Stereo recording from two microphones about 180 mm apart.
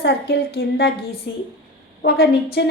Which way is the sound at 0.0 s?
70° left (ahead or behind).